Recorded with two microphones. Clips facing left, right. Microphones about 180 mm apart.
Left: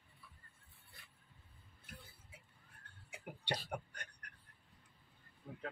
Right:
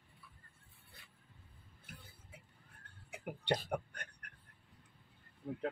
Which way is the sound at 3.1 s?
55° right (ahead or behind).